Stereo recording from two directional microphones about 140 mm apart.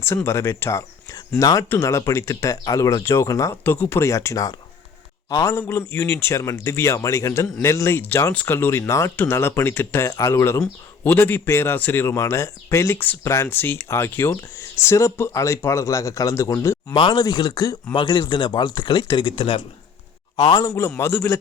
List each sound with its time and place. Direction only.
0.0 s speech: 15° left (ahead or behind)
16.9 s speech: 35° left (ahead or behind)
20.7 s speech: 20° left (ahead or behind)